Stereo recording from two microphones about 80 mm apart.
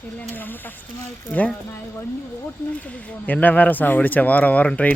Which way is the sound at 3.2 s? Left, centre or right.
Left.